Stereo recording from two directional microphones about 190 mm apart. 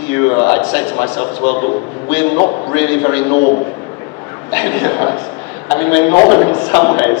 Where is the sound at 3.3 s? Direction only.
40° left (ahead or behind).